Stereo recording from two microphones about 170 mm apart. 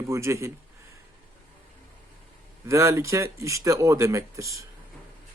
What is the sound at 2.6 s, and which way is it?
Speech, 15° right (ahead or behind).